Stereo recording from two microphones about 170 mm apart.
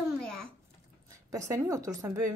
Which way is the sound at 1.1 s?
20° right (ahead or behind).